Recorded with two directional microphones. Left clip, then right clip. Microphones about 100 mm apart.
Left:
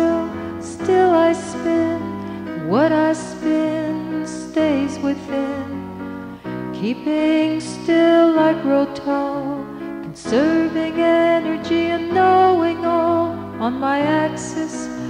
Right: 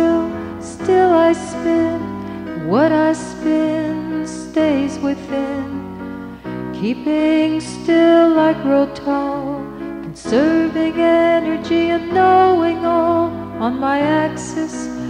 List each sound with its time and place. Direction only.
0.8 s music: 30° right (ahead or behind)
6.8 s music: 30° right (ahead or behind)